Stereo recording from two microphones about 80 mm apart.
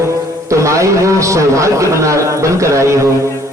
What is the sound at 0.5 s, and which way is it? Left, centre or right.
A man's voice, right.